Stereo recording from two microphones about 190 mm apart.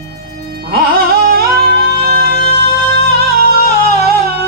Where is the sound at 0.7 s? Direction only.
55° right (ahead or behind).